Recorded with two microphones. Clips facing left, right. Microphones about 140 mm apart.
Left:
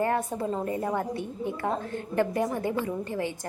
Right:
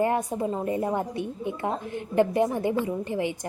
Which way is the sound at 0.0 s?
15° right (ahead or behind).